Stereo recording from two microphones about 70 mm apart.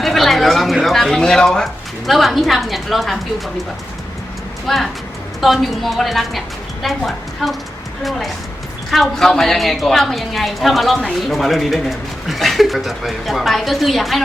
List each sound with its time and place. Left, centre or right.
0.0 s speech: centre
4.6 s a man's voice: centre
8.9 s a man's voice: centre